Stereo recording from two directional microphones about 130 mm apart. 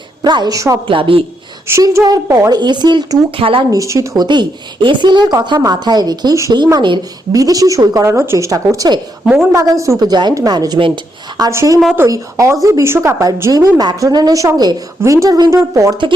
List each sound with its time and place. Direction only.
0.2 s a woman's voice: 35° right (ahead or behind)
0.9 s a woman's voice: 40° right (ahead or behind)
1.6 s a woman's voice: 20° right (ahead or behind); by 3.7 s 45° right (ahead or behind)
3.7 s a woman's voice: 25° right (ahead or behind)
4.2 s a woman's voice: 35° right (ahead or behind)